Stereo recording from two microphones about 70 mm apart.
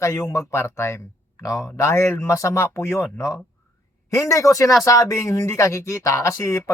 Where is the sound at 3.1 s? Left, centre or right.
Left.